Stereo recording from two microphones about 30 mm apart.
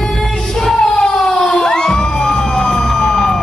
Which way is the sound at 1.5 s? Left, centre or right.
Left.